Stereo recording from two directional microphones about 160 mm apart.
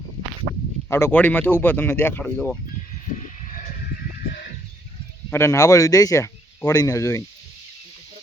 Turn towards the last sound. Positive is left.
turn(degrees=20)  # may be behind; listen again after turning